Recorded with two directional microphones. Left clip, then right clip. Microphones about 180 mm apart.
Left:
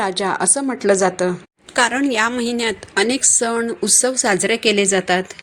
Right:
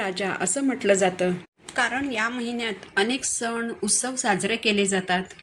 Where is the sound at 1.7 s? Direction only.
45° left (ahead or behind).